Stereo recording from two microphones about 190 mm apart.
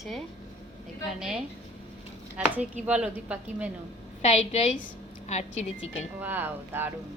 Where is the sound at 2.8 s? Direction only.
5° right (ahead or behind).